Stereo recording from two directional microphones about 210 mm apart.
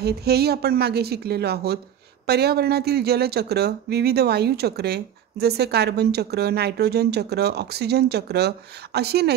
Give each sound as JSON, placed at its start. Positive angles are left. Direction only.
{"t": 0.0, "sound": "speech", "side_deg": -50}